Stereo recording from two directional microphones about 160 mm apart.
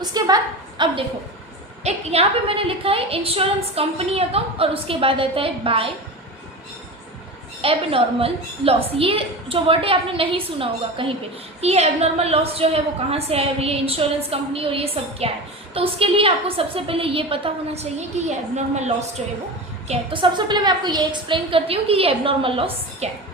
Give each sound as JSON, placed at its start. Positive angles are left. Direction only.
{"t": 0.0, "sound": "a woman's voice", "side_deg": -25}
{"t": 1.8, "sound": "a woman's voice", "side_deg": -40}
{"t": 7.6, "sound": "a woman's voice", "side_deg": -35}
{"t": 19.9, "sound": "a woman's voice", "side_deg": -30}